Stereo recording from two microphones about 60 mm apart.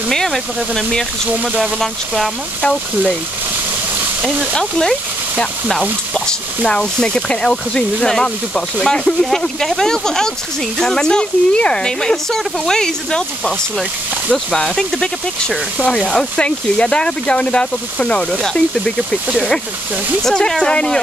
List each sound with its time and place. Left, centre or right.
0.1 s speech: centre
4.2 s speech: centre
4.6 s speech: centre
14.3 s speech: centre